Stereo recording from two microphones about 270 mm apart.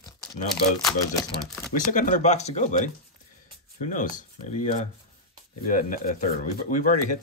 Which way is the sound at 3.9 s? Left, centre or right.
Left.